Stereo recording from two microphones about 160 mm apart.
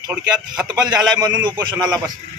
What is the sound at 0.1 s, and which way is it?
Speech, 5° right (ahead or behind).